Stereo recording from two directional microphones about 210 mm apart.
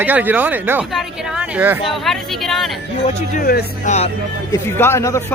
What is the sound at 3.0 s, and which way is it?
Speech, 40° left (ahead or behind).